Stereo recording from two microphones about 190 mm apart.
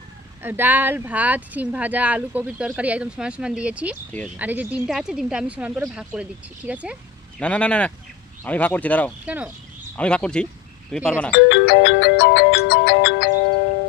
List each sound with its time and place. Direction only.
0.4 s speech: 10° right (ahead or behind)
7.3 s speech: 5° left (ahead or behind)
9.2 s speech: 5° right (ahead or behind)
10.0 s speech: 5° left (ahead or behind)
11.3 s music: 70° left (ahead or behind)